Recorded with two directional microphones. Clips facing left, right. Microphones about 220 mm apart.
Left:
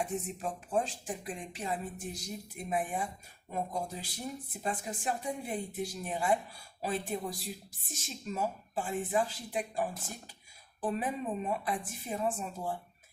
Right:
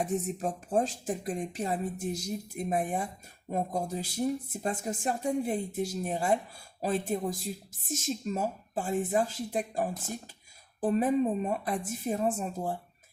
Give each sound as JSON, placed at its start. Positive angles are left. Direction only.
{"t": 0.0, "sound": "speech", "side_deg": -40}